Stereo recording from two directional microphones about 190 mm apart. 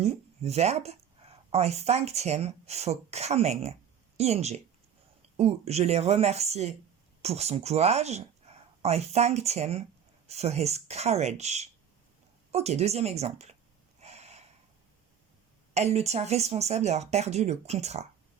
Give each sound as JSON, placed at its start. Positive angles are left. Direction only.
{"t": 0.0, "sound": "speech", "side_deg": -35}
{"t": 14.0, "sound": "gasp", "side_deg": -35}
{"t": 15.7, "sound": "speech", "side_deg": -35}